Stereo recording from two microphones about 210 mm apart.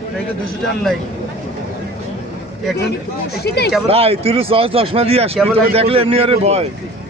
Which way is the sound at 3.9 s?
25° right (ahead or behind).